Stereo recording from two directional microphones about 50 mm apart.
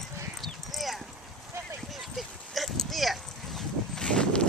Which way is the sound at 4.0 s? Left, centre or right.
Centre.